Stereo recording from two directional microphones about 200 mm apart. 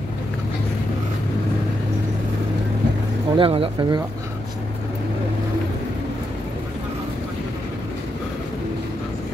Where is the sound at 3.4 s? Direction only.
25° right (ahead or behind).